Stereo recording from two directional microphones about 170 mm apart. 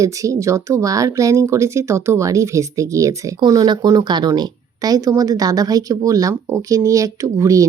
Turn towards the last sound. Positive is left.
turn(degrees=-20)  # may be behind; listen again after turning